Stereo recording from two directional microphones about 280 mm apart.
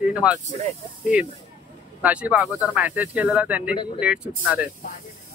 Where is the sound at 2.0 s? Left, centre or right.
Centre.